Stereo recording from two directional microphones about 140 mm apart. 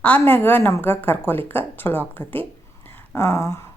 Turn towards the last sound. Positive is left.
turn(degrees=20)  # may be behind; listen again after turning